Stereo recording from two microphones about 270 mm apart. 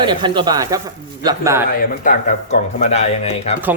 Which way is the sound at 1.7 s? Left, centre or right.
Left.